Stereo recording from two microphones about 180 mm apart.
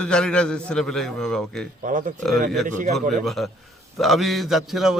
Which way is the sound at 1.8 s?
45° right (ahead or behind).